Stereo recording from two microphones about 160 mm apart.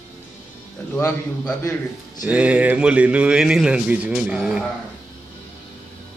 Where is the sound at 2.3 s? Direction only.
10° right (ahead or behind).